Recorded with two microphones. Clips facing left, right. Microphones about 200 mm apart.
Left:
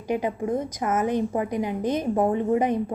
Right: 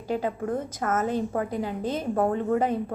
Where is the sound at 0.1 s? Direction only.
15° left (ahead or behind).